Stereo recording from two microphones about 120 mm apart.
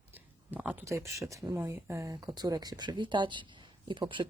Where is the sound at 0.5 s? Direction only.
15° right (ahead or behind).